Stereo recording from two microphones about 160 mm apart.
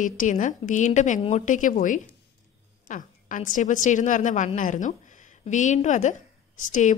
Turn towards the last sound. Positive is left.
turn(degrees=50)  # may be behind; listen again after turning